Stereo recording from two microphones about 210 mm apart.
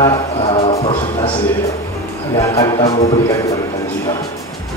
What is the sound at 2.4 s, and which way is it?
Speech, 15° left (ahead or behind).